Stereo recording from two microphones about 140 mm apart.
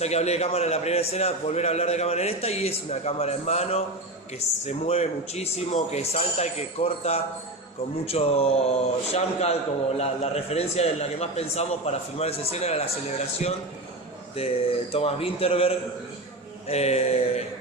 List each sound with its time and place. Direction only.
0.0 s a man's voice: 50° left (ahead or behind)
14.3 s a man's voice: 45° left (ahead or behind)